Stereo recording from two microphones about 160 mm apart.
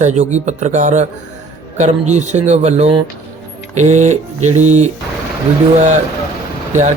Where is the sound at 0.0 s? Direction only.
45° right (ahead or behind).